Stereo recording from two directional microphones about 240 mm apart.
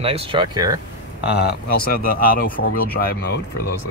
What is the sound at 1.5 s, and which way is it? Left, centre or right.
Speech, left.